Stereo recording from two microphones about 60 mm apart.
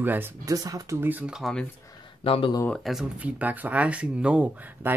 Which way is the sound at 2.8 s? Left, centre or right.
Centre.